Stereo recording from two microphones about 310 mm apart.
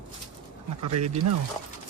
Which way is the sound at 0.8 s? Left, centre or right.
Right.